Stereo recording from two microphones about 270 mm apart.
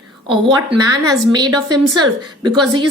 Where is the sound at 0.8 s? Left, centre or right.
Centre.